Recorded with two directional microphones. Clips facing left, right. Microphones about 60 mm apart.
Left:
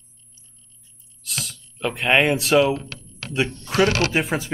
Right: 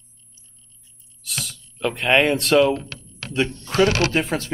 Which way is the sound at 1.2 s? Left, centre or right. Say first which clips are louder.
Even; centre.